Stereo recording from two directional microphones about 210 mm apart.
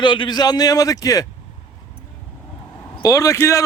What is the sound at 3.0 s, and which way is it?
Speech, 15° left (ahead or behind).